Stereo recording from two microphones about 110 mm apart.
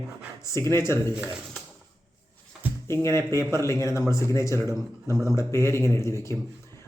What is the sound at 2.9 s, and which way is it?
Speech, 25° left (ahead or behind).